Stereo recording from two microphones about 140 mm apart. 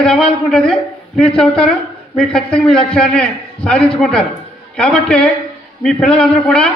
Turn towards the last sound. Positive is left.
turn(degrees=5)  # may be behind; listen again after turning